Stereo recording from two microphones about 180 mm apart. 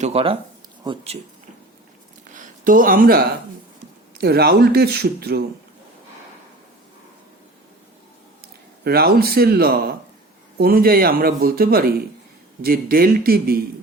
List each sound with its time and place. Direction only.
0.0 s speech: 35° right (ahead or behind)
2.3 s speech: 50° right (ahead or behind)
8.8 s speech: 60° right (ahead or behind)